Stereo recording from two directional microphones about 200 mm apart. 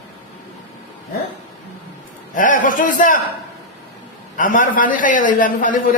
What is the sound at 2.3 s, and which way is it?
Speech, 40° left (ahead or behind).